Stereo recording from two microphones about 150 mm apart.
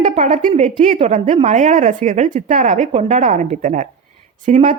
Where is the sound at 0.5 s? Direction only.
45° right (ahead or behind).